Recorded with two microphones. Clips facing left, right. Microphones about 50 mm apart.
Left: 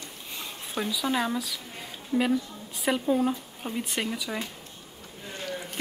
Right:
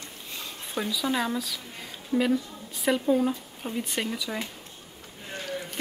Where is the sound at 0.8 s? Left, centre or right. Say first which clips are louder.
Even; centre.